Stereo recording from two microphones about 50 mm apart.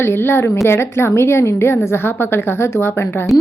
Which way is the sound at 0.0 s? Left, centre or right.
Left.